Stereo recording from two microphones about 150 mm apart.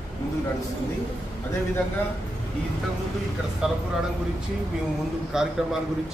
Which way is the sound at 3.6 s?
5° right (ahead or behind).